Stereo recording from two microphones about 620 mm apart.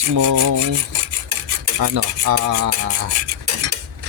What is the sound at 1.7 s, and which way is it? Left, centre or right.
Rub, right.